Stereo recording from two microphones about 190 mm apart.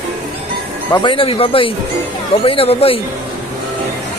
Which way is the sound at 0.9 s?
25° left (ahead or behind).